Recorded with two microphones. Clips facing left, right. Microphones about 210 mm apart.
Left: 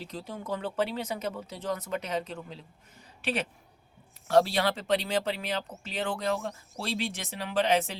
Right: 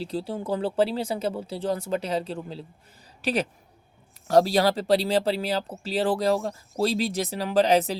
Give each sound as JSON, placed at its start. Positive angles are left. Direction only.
{"t": 0.0, "sound": "speech", "side_deg": -30}